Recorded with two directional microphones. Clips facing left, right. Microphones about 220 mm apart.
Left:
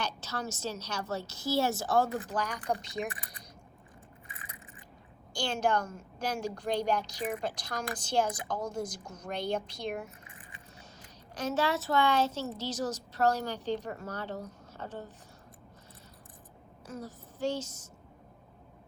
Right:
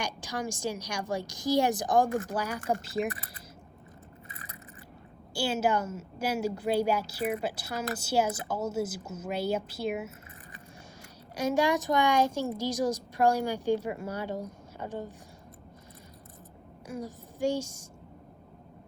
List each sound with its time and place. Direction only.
0.0 s a woman's voice: 15° right (ahead or behind)
2.0 s speech: 45° right (ahead or behind)
2.3 s a woman's voice: 10° right (ahead or behind)
5.3 s a woman's voice: 5° right (ahead or behind)
11.3 s a woman's voice: 10° right (ahead or behind)
16.8 s a woman's voice: 10° right (ahead or behind)